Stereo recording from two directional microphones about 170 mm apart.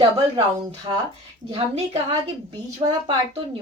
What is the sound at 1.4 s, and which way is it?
Speech, 35° right (ahead or behind).